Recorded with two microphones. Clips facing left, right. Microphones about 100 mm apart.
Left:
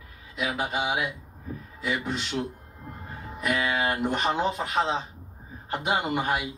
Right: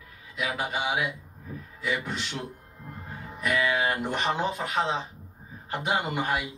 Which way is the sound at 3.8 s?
Centre (ahead or behind).